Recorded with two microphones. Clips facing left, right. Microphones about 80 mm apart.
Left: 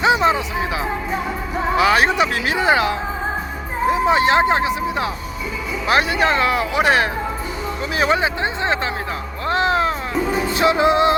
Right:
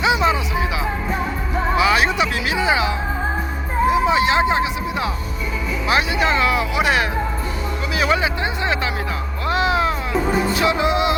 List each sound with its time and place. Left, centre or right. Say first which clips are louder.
0.0 s music: left 2 dB; left
1.7 s speech: left 2 dB; left
9.5 s a sound: left 1 dB; left
10.5 s music: left 3 dB; left